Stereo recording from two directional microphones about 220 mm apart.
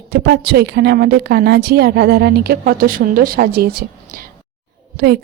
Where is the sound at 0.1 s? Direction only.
50° right (ahead or behind).